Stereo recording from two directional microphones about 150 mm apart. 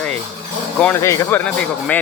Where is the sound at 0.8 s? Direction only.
15° left (ahead or behind).